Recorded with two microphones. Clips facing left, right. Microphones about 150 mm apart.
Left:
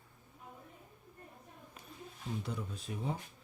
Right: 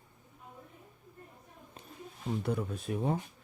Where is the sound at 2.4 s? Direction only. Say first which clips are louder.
Right 8 dB; 55° right (ahead or behind).